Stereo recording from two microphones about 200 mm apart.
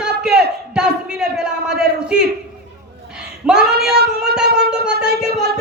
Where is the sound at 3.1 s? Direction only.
5° right (ahead or behind).